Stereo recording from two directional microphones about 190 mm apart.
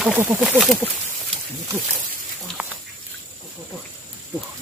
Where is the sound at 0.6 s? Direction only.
Centre (ahead or behind).